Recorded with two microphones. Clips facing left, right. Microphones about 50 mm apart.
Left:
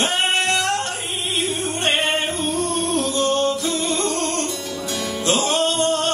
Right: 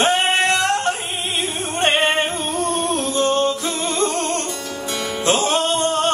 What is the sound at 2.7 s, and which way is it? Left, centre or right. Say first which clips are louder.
Music: right 1 dB; right.